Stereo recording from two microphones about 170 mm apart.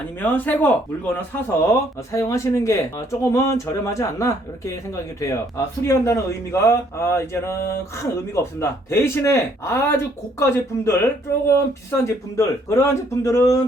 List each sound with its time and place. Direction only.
0.2 s speech: 10° left (ahead or behind)